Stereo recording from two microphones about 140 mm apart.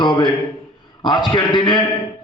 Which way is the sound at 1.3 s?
30° left (ahead or behind).